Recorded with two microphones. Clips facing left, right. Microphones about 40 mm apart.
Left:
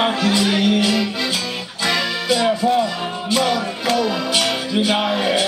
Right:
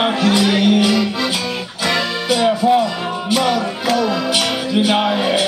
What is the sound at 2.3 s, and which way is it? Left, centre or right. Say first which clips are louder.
Music: right 3 dB; centre.